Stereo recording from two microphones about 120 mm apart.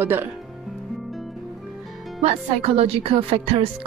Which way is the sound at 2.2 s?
60° right (ahead or behind).